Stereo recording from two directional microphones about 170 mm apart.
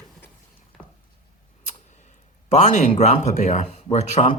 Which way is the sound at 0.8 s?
Centre (ahead or behind).